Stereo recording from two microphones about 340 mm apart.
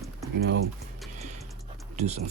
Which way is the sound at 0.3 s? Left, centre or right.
Right.